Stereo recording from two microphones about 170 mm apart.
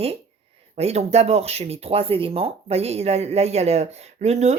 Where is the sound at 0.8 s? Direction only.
40° right (ahead or behind).